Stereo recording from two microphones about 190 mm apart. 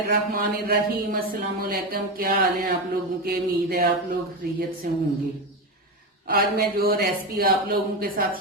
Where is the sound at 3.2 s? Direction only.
55° right (ahead or behind).